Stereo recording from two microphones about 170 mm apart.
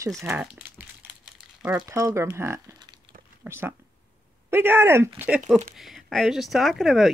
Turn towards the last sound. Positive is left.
turn(degrees=0)  # may be behind; listen again after turning